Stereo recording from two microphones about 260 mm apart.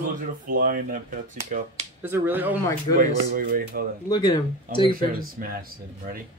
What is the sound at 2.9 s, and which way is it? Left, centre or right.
Speech, right.